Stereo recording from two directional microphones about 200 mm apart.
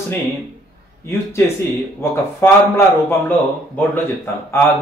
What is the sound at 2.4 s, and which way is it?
Speech, 10° left (ahead or behind).